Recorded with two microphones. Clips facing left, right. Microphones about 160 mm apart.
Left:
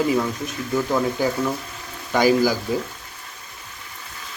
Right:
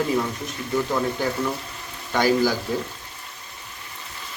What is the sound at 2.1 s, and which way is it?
Speech, 10° left (ahead or behind).